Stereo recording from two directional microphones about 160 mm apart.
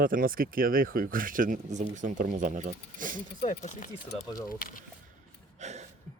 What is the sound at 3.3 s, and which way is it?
Speech, 45° left (ahead or behind).